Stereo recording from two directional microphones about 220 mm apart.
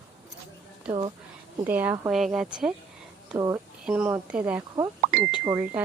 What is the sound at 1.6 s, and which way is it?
Speech, 10° right (ahead or behind).